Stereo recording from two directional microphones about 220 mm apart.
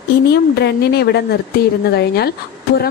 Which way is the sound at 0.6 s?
50° left (ahead or behind).